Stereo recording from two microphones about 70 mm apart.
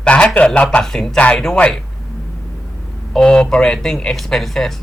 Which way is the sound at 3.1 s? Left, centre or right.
Centre.